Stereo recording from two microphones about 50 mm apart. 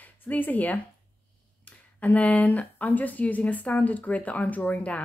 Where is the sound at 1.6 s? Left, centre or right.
Left.